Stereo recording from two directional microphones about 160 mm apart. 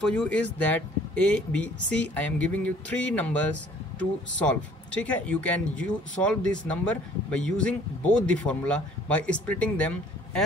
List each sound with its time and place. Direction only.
0.0 s speech: 5° left (ahead or behind)